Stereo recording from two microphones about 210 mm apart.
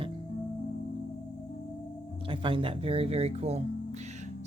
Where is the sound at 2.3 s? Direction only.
25° right (ahead or behind).